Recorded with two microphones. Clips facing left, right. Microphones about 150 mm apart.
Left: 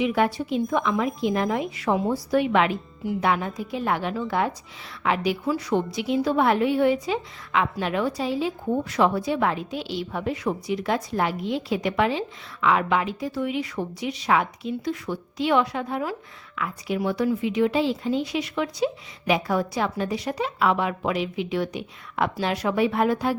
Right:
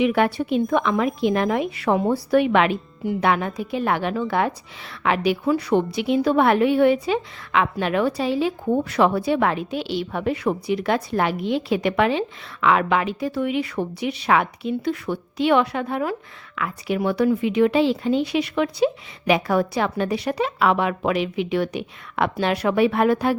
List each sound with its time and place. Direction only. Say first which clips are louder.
0.0 s a woman's voice: right 3 dB; 65° right (ahead or behind)